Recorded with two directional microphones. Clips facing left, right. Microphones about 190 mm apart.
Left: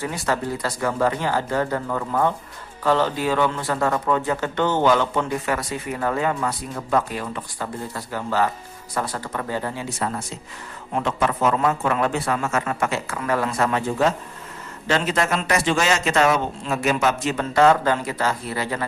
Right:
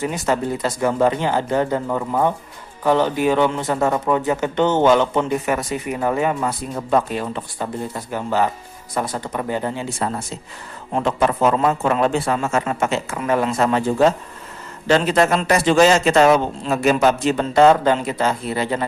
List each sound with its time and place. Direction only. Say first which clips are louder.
0.3 s a man's voice: right 3 dB; 20° right (ahead or behind)